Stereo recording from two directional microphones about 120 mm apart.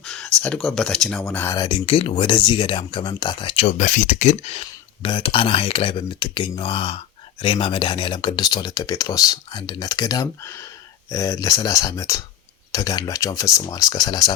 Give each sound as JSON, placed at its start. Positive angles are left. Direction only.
{"t": 0.0, "sound": "a sound", "side_deg": 5}
{"t": 0.4, "sound": "speech", "side_deg": 5}
{"t": 1.3, "sound": "speech", "side_deg": 15}
{"t": 1.5, "sound": "speech", "side_deg": 45}
{"t": 3.8, "sound": "speech", "side_deg": 90}
{"t": 5.0, "sound": "speech", "side_deg": 45}